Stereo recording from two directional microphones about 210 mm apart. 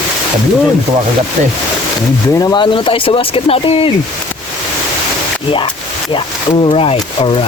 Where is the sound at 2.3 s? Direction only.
20° left (ahead or behind).